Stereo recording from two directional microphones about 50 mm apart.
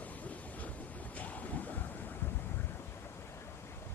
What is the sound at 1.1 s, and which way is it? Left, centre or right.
Ocean, left.